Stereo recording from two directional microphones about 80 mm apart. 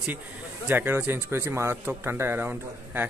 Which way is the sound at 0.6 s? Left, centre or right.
Right.